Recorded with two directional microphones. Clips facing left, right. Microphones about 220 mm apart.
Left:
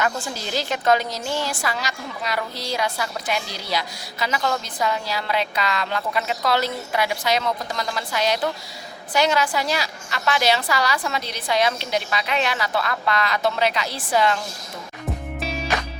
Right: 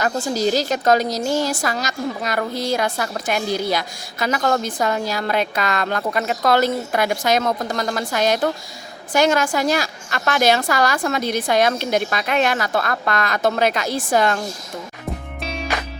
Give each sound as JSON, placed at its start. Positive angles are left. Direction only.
{"t": 0.0, "sound": "a woman's voice", "side_deg": -40}
{"t": 15.4, "sound": "music", "side_deg": 0}